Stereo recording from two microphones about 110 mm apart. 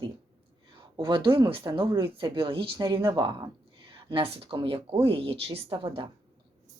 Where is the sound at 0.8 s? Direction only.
45° right (ahead or behind).